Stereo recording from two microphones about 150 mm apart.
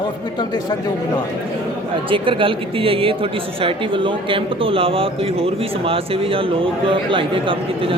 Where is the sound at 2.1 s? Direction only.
35° right (ahead or behind).